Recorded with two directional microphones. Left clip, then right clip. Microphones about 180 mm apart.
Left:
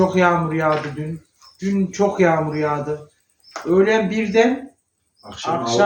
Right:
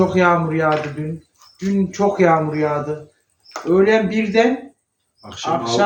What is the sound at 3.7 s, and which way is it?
Speech, 5° right (ahead or behind).